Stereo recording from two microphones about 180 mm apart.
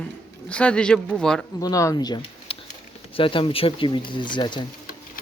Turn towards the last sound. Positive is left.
turn(degrees=25)  # may be behind; listen again after turning